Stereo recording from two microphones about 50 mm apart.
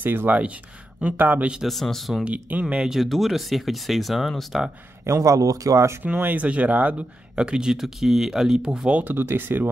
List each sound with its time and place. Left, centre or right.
0.0 s speech: right
1.7 s speech: centre
2.2 s speech: right
2.8 s speech: centre
5.0 s speech: right
6.0 s speech: right
7.3 s speech: centre
9.2 s speech: right